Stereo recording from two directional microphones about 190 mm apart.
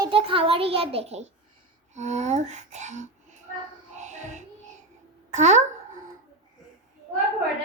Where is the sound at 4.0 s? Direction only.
40° right (ahead or behind).